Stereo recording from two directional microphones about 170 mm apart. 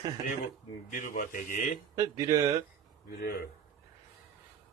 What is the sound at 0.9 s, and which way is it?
Speech, 50° left (ahead or behind).